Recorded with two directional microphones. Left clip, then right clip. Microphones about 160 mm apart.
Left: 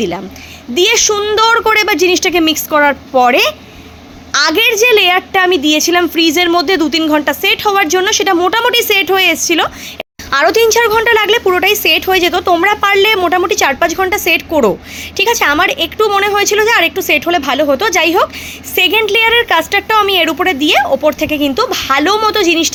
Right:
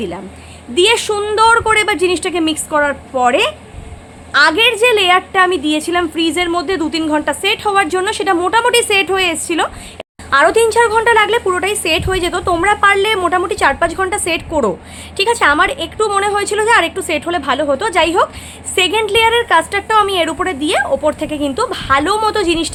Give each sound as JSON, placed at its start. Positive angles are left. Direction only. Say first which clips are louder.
{"t": 0.7, "sound": "a woman's voice", "louder": "left 2 dB", "side_deg": 15}